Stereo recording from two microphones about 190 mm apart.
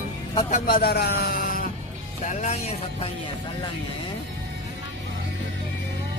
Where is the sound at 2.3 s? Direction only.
35° left (ahead or behind).